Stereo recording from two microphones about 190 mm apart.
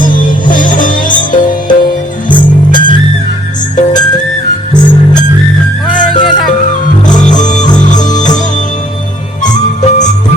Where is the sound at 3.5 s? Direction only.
40° left (ahead or behind).